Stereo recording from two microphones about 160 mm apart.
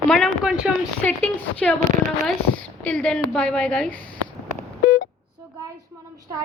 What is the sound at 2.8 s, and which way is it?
A woman's voice, 10° left (ahead or behind).